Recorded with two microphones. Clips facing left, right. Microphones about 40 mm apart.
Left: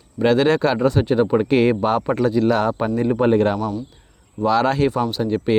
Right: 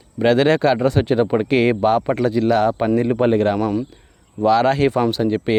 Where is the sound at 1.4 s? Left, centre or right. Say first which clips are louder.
Even; right.